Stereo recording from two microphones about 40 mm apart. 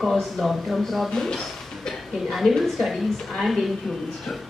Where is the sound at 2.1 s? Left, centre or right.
Centre.